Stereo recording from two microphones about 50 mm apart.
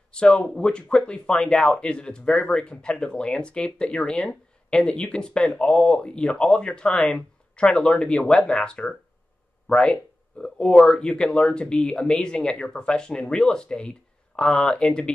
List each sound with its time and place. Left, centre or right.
0.3 s speech: centre